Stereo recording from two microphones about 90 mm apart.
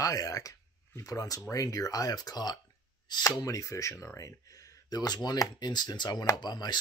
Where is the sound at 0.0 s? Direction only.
40° left (ahead or behind).